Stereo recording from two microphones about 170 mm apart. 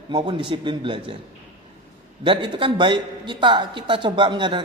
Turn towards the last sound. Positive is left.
turn(degrees=-25)  # may be behind; listen again after turning